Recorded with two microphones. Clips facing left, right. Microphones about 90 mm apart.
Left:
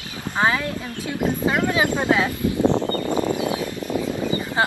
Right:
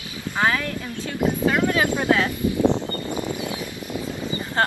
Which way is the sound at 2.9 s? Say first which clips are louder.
Left 5 dB; 50° left (ahead or behind).